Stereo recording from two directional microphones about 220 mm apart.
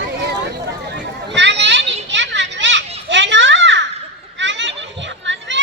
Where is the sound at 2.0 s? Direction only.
55° right (ahead or behind).